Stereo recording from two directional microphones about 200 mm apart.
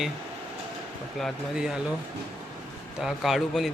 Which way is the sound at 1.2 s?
Centre (ahead or behind).